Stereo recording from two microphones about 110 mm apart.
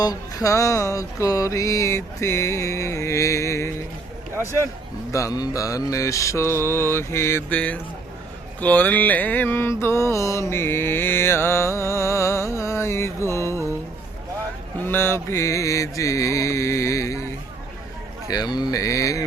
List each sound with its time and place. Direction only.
0.0 s music: 35° left (ahead or behind)
4.4 s speech: 25° right (ahead or behind)
5.1 s music: 30° left (ahead or behind)
7.5 s speech: 10° left (ahead or behind)
9.8 s music: 25° left (ahead or behind)
14.8 s music: 20° left (ahead or behind)
18.3 s speech: 35° left (ahead or behind)